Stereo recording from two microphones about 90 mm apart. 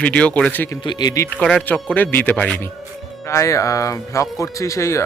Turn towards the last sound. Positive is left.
turn(degrees=35)  # may be behind; listen again after turning